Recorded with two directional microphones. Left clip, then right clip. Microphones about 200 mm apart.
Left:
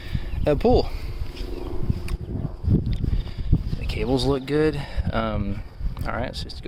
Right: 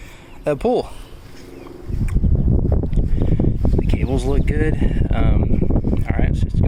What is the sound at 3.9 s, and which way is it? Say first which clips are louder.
Speech: left 5 dB; 15° left (ahead or behind).